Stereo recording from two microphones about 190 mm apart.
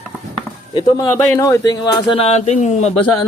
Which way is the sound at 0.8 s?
15° left (ahead or behind).